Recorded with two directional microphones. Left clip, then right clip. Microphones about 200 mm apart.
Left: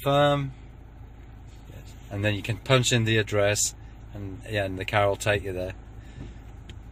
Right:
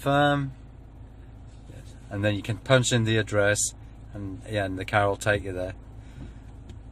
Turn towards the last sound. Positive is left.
turn(degrees=5)  # may be behind; listen again after turning